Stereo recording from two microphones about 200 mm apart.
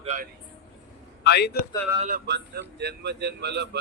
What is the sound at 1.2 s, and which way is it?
Speech, 55° left (ahead or behind).